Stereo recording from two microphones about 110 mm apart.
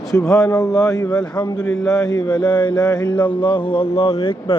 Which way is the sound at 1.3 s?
40° left (ahead or behind).